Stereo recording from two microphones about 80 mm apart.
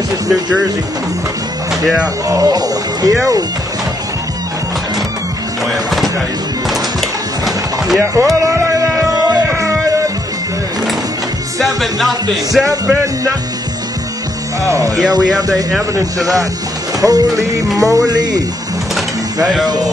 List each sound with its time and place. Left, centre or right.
2.2 s speech: right
5.7 s speech: centre
6.7 s a sound: centre
8.0 s speech: right
8.4 s music: right
11.6 s music: centre
13.0 s speech: right
14.6 s speech: right
15.0 s music: right
17.0 s speech: right
17.7 s music: right
19.4 s music: centre